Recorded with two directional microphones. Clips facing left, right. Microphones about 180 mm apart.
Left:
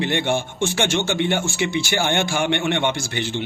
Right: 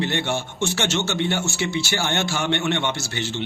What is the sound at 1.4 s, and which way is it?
A man's voice, 15° left (ahead or behind).